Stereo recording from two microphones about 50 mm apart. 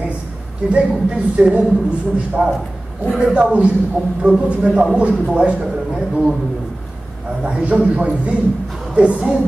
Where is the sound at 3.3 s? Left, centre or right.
Right.